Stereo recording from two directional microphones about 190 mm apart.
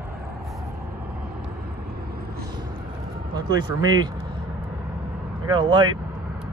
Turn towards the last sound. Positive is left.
turn(degrees=-20)  # may be behind; listen again after turning